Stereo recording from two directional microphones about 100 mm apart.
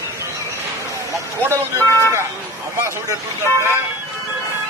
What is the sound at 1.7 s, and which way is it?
Speech, 25° left (ahead or behind).